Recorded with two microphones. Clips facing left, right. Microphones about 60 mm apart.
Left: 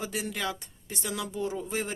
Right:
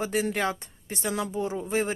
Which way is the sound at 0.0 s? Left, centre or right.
Right.